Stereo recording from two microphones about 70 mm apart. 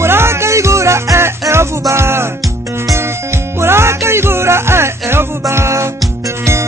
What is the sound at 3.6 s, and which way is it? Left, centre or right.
Music, right.